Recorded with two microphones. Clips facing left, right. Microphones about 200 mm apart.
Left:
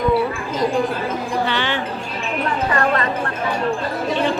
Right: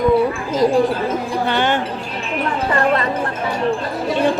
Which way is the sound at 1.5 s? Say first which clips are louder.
Right 4 dB; 45° right (ahead or behind).